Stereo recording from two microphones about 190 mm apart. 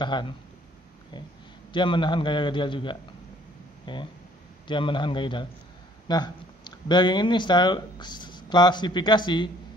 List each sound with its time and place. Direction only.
0.0 s a man's voice: 25° left (ahead or behind)
1.7 s a man's voice: 25° left (ahead or behind)